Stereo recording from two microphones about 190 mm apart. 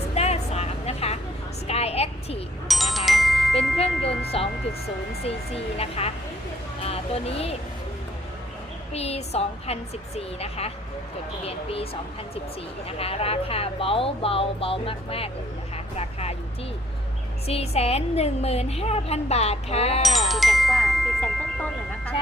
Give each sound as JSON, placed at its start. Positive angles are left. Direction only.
{"t": 0.1, "sound": "vehicle", "side_deg": 35}
{"t": 1.6, "sound": "a sound", "side_deg": 35}
{"t": 2.6, "sound": "chime", "side_deg": 0}
{"t": 4.3, "sound": "a woman's voice", "side_deg": 30}
{"t": 5.7, "sound": "a woman's voice", "side_deg": 30}
{"t": 8.9, "sound": "a woman's voice", "side_deg": 35}
{"t": 13.0, "sound": "speech", "side_deg": 30}
{"t": 17.4, "sound": "a woman's voice", "side_deg": 30}
{"t": 20.0, "sound": "music", "side_deg": 0}